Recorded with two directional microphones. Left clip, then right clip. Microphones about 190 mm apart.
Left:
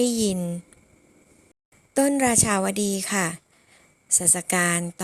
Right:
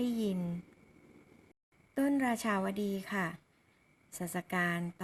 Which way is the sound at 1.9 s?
50° left (ahead or behind).